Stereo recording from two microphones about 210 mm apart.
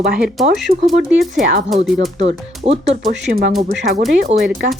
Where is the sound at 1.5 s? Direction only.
40° right (ahead or behind).